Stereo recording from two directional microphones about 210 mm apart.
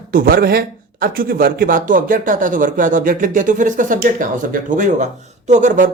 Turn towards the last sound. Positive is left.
turn(degrees=-35)  # may be behind; listen again after turning